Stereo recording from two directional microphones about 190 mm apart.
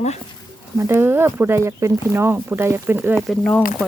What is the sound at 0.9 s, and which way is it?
Speech, 10° right (ahead or behind).